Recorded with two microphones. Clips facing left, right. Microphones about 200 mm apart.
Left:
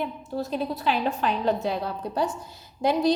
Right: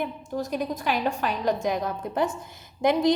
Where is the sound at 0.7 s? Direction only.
45° right (ahead or behind).